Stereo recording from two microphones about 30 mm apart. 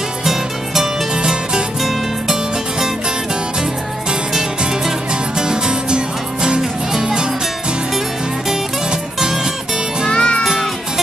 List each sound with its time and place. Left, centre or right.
0.2 s music: centre
1.1 s music: right
4.3 s music: centre
5.4 s music: right
6.9 s music: centre
10.1 s music: left